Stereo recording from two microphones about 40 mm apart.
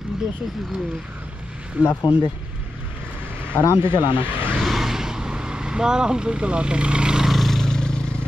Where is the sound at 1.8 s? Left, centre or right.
Right.